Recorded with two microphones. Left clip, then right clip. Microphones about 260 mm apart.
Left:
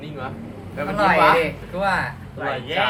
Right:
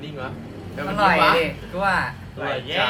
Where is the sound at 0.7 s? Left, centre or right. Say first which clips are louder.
Left 1 dB; centre.